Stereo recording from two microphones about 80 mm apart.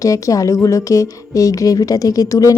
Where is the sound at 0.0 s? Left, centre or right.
Left.